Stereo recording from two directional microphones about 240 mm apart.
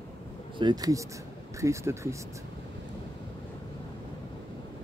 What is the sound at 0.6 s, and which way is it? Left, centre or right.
Speech, centre.